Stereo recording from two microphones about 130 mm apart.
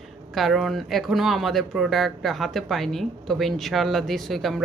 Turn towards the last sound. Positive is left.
turn(degrees=0)  # may be behind; listen again after turning